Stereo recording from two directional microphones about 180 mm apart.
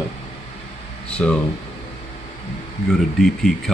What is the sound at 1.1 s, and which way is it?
Speech, 5° left (ahead or behind).